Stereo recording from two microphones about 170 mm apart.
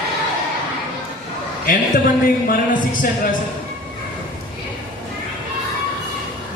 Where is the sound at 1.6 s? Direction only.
55° left (ahead or behind).